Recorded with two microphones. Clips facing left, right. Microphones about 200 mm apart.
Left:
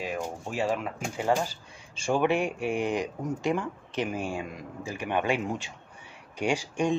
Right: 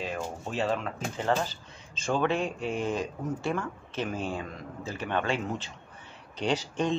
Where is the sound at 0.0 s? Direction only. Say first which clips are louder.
Left 1 dB; 10° left (ahead or behind).